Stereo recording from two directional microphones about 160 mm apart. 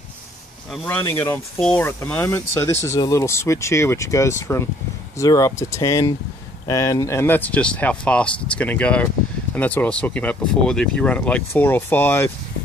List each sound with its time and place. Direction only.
0.8 s speech: 10° left (ahead or behind)